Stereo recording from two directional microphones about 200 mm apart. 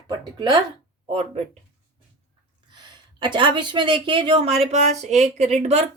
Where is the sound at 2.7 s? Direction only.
20° right (ahead or behind).